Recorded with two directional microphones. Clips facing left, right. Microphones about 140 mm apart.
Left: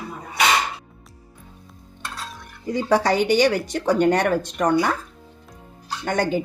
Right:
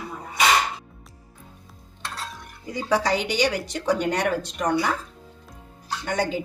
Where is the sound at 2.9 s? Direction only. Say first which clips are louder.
Left 4 dB; 50° left (ahead or behind).